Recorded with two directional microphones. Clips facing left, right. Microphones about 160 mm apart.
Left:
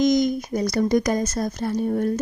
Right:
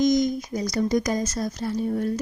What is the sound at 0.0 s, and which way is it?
A woman's voice, 70° left (ahead or behind).